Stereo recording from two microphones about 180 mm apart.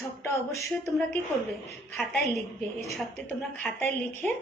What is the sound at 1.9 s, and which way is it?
A woman's voice, 5° left (ahead or behind).